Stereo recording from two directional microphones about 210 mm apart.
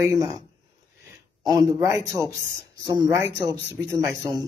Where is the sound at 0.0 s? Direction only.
15° right (ahead or behind).